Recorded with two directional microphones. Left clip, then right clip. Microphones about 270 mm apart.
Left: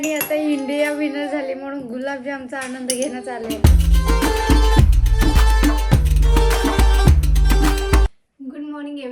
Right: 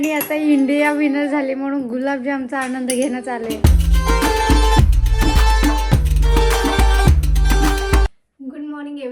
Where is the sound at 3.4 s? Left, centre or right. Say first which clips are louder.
Right 1 dB; centre.